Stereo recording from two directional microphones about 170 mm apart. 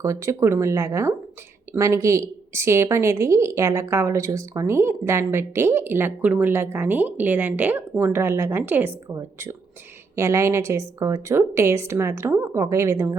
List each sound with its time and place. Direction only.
0.0 s a woman's voice: 15° right (ahead or behind)